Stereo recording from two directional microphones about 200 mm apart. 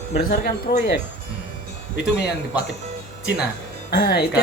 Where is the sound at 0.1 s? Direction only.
40° left (ahead or behind).